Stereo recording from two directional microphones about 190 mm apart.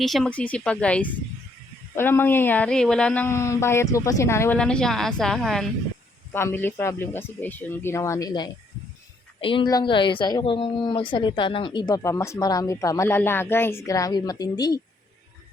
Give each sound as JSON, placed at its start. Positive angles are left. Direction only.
{"t": 0.0, "sound": "speech", "side_deg": 0}
{"t": 6.3, "sound": "speech", "side_deg": 10}